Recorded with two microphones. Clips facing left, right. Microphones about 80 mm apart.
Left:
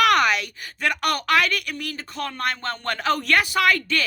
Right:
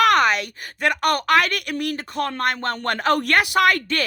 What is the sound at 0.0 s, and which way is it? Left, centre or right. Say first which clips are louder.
A woman's voice: right 2 dB; right.